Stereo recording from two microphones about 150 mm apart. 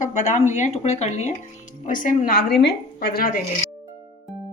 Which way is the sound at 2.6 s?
90° left.